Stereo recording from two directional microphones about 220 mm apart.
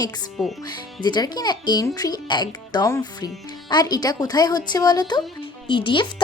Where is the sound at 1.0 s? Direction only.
20° left (ahead or behind).